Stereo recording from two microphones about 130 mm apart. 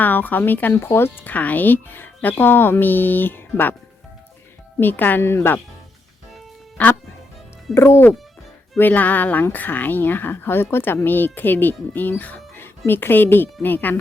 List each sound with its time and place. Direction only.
0.0 s speech: 15° left (ahead or behind)
4.8 s speech: 15° left (ahead or behind)
6.8 s speech: 10° left (ahead or behind)